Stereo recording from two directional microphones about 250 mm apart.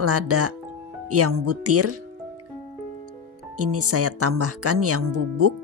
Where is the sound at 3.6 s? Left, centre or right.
Right.